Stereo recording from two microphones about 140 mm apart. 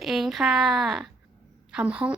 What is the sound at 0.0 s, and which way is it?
A woman's voice, centre (ahead or behind).